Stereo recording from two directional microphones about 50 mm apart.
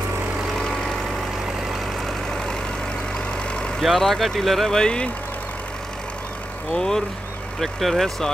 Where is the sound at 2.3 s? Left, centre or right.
Centre.